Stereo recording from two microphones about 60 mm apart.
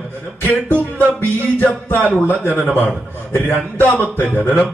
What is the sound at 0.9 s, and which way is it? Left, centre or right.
A man's voice, left.